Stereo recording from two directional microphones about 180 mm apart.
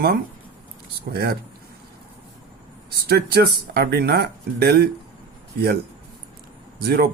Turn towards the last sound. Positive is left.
turn(degrees=-60)  # may be behind; listen again after turning